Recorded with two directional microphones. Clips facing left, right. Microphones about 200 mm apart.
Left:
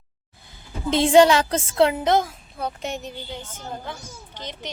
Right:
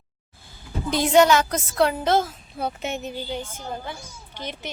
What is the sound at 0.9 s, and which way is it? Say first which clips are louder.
A woman's voice: left 2 dB; 25° left (ahead or behind).